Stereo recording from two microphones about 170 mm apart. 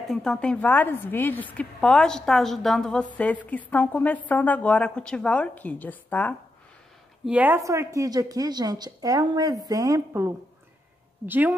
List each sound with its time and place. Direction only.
0.0 s a woman's voice: centre (ahead or behind)
7.2 s a woman's voice: 10° right (ahead or behind)